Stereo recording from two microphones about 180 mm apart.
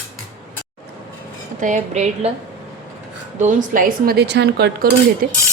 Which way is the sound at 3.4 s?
45° right (ahead or behind).